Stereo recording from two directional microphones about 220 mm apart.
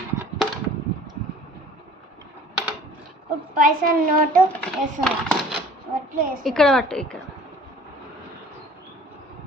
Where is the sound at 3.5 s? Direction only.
40° right (ahead or behind).